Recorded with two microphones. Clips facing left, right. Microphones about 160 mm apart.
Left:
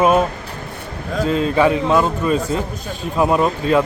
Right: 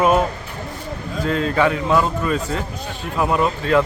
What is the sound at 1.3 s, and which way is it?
A man's voice, 20° left (ahead or behind).